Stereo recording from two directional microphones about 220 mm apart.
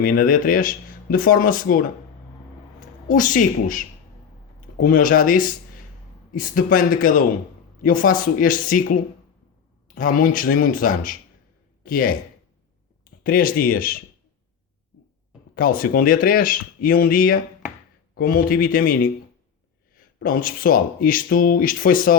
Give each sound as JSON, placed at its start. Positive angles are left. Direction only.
{"t": 0.0, "sound": "speech", "side_deg": 40}
{"t": 3.1, "sound": "speech", "side_deg": 35}
{"t": 9.9, "sound": "a man's voice", "side_deg": 40}
{"t": 13.2, "sound": "speech", "side_deg": 40}
{"t": 15.5, "sound": "speech", "side_deg": 40}
{"t": 20.1, "sound": "speech", "side_deg": 40}